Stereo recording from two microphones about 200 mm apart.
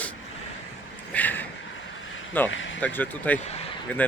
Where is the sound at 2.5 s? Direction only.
70° left (ahead or behind).